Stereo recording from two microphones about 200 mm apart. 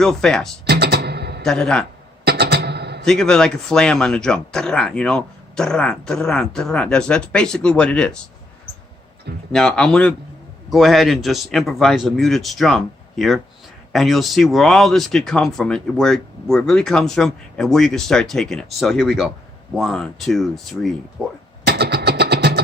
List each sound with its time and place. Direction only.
0.0 s speech: 5° left (ahead or behind)
0.7 s music: 55° right (ahead or behind)
1.5 s speech: 5° left (ahead or behind)
2.2 s music: 55° right (ahead or behind)
3.0 s speech: centre (ahead or behind)
9.5 s speech: 5° left (ahead or behind)
21.7 s guitar: 55° right (ahead or behind)